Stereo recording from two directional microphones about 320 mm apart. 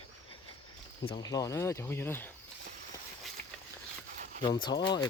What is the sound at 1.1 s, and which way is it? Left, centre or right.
Speech, centre.